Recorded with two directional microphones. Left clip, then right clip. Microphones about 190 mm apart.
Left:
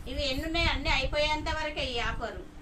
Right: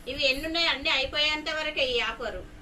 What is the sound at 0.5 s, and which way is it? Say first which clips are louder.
A woman's voice: right 3 dB; 35° left (ahead or behind).